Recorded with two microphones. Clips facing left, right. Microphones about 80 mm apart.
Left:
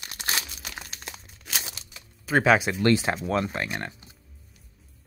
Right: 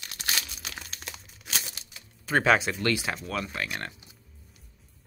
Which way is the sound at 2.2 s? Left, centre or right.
Centre.